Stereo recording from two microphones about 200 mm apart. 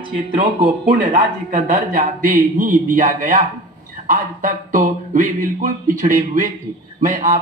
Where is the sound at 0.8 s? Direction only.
40° right (ahead or behind).